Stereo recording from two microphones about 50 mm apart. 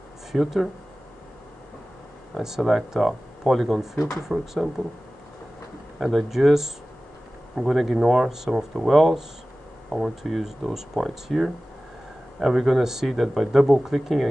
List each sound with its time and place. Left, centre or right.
0.3 s speech: centre
2.3 s speech: centre
5.9 s speech: centre